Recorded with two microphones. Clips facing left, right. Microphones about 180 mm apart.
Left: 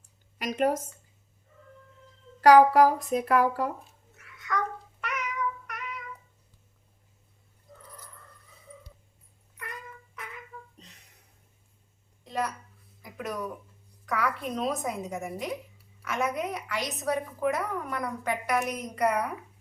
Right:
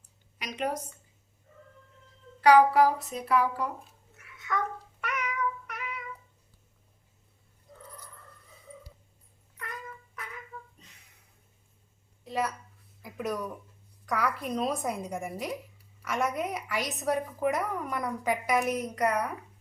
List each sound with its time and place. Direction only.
0.3 s speech: 45° left (ahead or behind)
2.4 s a child's voice: 45° left (ahead or behind)
4.2 s cat: 5° right (ahead or behind)
12.2 s a sound: 5° right (ahead or behind)
14.0 s a woman's voice: centre (ahead or behind)